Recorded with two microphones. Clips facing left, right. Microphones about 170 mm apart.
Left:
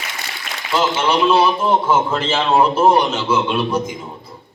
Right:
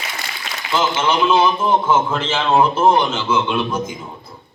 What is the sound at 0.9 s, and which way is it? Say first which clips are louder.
Speech: left 1 dB; 35° left (ahead or behind).